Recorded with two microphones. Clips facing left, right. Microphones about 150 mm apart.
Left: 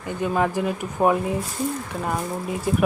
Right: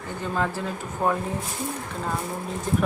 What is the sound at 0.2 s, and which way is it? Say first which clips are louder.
Speech: left 5 dB; 15° left (ahead or behind).